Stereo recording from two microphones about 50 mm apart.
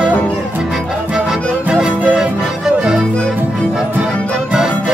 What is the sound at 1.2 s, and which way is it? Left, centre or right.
Music, centre.